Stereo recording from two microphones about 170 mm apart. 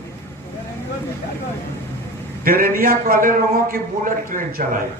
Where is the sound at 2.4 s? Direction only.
55° right (ahead or behind).